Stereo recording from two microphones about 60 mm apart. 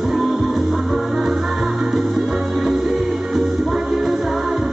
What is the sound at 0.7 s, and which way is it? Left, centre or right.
Music, centre.